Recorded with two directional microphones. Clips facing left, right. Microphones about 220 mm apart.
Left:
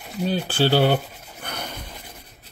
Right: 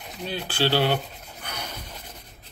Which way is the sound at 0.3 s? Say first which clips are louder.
Left 4 dB; 45° left (ahead or behind).